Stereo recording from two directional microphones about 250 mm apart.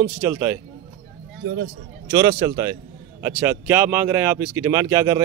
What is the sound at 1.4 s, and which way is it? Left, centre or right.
Speech, right.